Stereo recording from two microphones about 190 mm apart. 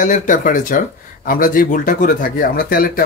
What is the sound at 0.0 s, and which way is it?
Speech, 40° left (ahead or behind).